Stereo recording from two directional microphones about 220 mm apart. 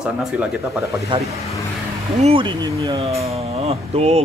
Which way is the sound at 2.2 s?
20° right (ahead or behind).